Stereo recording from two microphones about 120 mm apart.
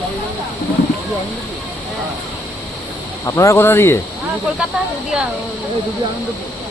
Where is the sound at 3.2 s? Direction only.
25° left (ahead or behind).